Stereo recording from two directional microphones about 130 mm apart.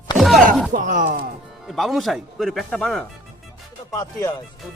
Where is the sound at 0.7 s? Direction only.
85° right.